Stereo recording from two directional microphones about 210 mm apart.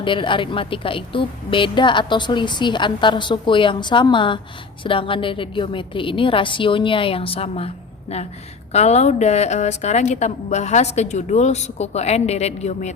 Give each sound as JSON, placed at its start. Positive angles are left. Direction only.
{"t": 0.0, "sound": "a woman's voice", "side_deg": 25}
{"t": 8.7, "sound": "a woman's voice", "side_deg": 30}